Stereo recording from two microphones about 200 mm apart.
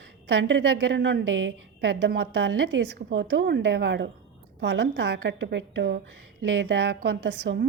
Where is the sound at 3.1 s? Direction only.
70° right (ahead or behind).